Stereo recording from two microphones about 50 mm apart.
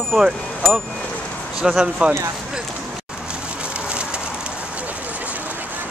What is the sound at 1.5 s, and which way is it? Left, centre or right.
Speech, centre.